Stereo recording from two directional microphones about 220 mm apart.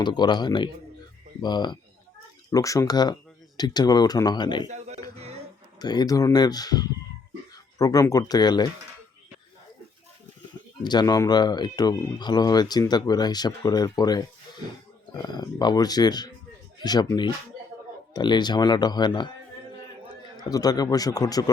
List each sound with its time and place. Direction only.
0.0 s speech: 20° left (ahead or behind)
5.1 s a sound: 30° right (ahead or behind)
5.8 s speech: 20° left (ahead or behind)
10.8 s speech: 20° left (ahead or behind)
20.3 s speech: 15° left (ahead or behind)